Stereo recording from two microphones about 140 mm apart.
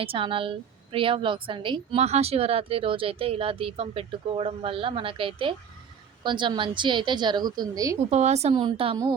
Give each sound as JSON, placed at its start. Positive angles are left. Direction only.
{"t": 0.0, "sound": "a woman's voice", "side_deg": -40}
{"t": 8.1, "sound": "a woman's voice", "side_deg": -50}
{"t": 8.5, "sound": "a woman's voice", "side_deg": -35}